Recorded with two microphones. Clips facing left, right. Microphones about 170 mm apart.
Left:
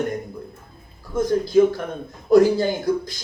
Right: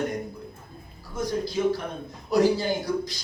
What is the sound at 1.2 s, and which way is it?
A man's voice, 50° left (ahead or behind).